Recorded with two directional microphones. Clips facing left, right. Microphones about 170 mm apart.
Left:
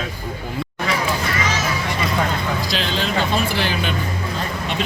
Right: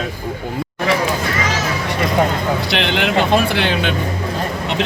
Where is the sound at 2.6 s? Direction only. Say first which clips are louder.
Right 5 dB; 65° right (ahead or behind).